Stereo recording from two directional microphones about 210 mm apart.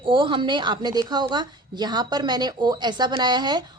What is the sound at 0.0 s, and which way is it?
A woman's voice, 25° right (ahead or behind).